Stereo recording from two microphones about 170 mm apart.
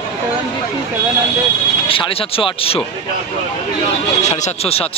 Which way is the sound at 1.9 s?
30° left (ahead or behind).